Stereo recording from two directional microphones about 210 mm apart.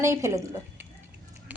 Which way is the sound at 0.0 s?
15° right (ahead or behind).